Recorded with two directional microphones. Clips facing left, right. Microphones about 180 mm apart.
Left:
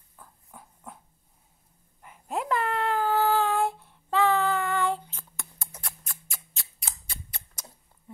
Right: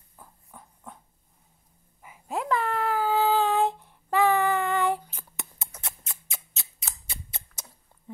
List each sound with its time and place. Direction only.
0.5 s dog: centre (ahead or behind)
2.0 s child singing: 5° right (ahead or behind); by 5.7 s 20° right (ahead or behind)
5.8 s a sound: 20° right (ahead or behind)